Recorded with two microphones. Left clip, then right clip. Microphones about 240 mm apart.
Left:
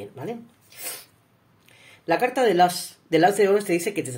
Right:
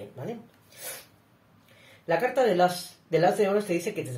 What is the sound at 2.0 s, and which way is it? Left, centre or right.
Speech, left.